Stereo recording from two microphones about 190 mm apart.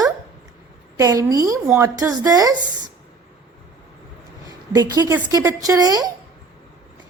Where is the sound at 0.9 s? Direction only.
15° right (ahead or behind).